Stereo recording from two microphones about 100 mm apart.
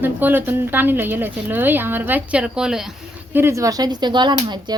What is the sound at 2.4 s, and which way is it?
Speech, 5° right (ahead or behind).